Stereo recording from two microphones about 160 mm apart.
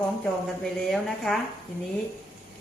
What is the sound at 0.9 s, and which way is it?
Speech, centre (ahead or behind).